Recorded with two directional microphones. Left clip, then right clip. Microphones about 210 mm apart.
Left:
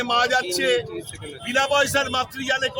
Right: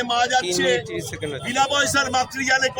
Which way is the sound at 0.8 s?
35° right (ahead or behind).